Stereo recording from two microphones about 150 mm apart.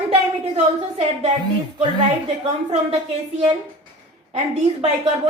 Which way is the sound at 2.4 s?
40° right (ahead or behind).